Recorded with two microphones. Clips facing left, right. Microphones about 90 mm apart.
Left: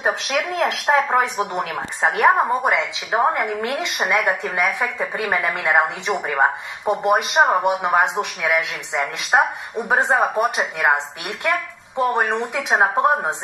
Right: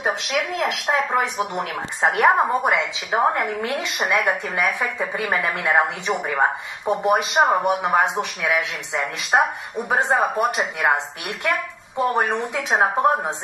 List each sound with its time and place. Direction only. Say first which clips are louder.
0.9 s speech: left 4 dB; 25° left (ahead or behind)
1.6 s speech: right 1 dB; centre (ahead or behind)